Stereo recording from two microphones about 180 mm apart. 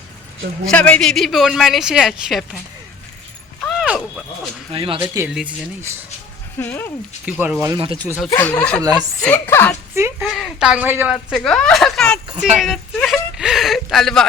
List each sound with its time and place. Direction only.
0.6 s a man's voice: 5° left (ahead or behind)
3.6 s a sound: centre (ahead or behind)
4.7 s speech: 30° right (ahead or behind)
5.3 s a man's voice: 5° right (ahead or behind)
6.6 s a woman's voice: 10° left (ahead or behind)
7.3 s speech: 10° right (ahead or behind)
7.8 s speech: 30° right (ahead or behind)
8.4 s a woman's voice: 10° left (ahead or behind)
8.8 s speech: 20° right (ahead or behind)
9.2 s a woman's voice: 10° left (ahead or behind)
9.9 s a sound: 15° right (ahead or behind)
10.2 s a woman's voice: centre (ahead or behind)